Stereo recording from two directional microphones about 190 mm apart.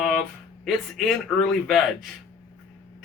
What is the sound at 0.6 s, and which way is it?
Speech, centre (ahead or behind).